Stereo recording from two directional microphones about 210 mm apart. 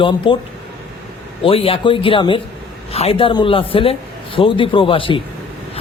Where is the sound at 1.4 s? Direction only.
25° left (ahead or behind).